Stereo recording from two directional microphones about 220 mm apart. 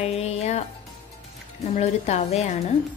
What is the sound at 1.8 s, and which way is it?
Speech, 30° left (ahead or behind).